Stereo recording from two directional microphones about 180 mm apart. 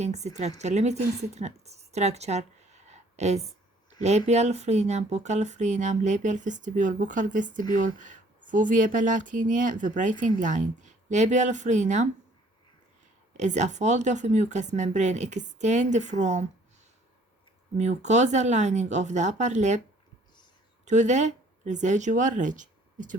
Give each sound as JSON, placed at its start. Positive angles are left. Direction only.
{"t": 0.0, "sound": "a woman's voice", "side_deg": -40}
{"t": 13.3, "sound": "speech", "side_deg": -40}
{"t": 17.7, "sound": "speech", "side_deg": -40}
{"t": 20.8, "sound": "speech", "side_deg": -40}